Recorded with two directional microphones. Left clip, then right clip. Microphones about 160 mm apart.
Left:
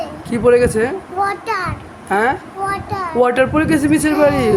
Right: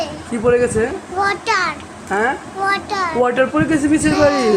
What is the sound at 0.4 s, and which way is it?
Speech, 20° left (ahead or behind).